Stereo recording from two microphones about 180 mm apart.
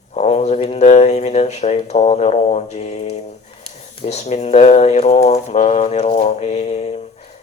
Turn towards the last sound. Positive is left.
turn(degrees=35)  # may be behind; listen again after turning